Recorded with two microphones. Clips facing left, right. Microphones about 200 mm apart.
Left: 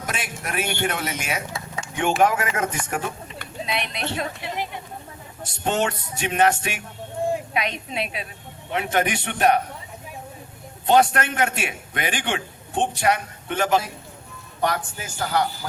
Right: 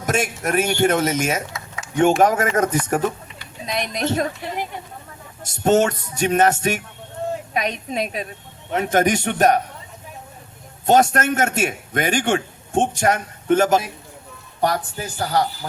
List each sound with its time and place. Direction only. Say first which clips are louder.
0.0 s a man's voice: right 9 dB; 45° right (ahead or behind)
3.7 s a man's voice: right 6 dB; 40° right (ahead or behind)
7.2 s a sound: left 2 dB; 10° left (ahead or behind)
7.5 s a man's voice: right 3 dB; 40° right (ahead or behind)
10.8 s a man's voice: right 2 dB; 45° right (ahead or behind)